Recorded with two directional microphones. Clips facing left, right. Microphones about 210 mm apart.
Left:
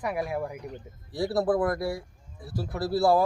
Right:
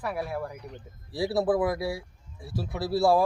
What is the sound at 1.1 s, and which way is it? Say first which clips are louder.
Speech: even; centre (ahead or behind).